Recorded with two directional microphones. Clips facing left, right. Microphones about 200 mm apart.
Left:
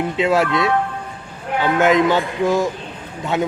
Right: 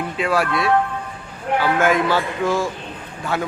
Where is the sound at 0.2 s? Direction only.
20° left (ahead or behind).